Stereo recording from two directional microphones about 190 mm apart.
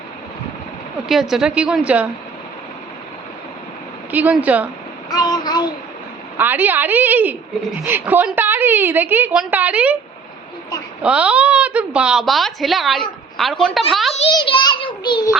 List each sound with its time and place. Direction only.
1.0 s speech: centre (ahead or behind)
4.1 s a woman's voice: 10° right (ahead or behind)
5.0 s child singing: 20° left (ahead or behind)
6.3 s a woman's voice: 10° right (ahead or behind)
11.0 s speech: 5° right (ahead or behind)
14.3 s a child's voice: 25° left (ahead or behind)